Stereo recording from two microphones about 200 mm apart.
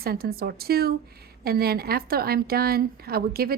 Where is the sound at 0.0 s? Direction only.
50° right (ahead or behind).